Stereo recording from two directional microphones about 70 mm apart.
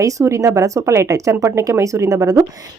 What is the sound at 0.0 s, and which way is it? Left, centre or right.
A woman's voice, right.